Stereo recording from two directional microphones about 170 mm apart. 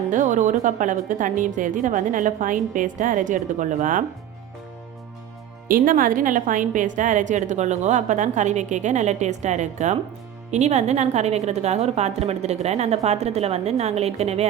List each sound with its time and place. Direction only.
0.1 s a woman's voice: 45° right (ahead or behind)
5.6 s a woman's voice: 55° right (ahead or behind); by 14.4 s 40° right (ahead or behind)